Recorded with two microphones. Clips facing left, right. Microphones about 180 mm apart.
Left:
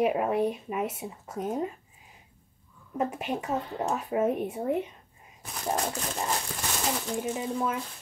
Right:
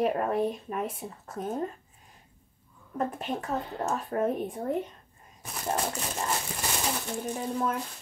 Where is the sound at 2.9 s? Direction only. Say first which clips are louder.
Left 1 dB; 10° left (ahead or behind).